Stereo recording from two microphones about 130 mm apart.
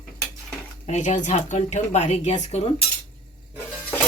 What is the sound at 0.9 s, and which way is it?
Speech, 65° left (ahead or behind).